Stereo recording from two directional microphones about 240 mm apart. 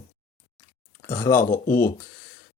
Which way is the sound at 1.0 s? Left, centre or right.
Centre.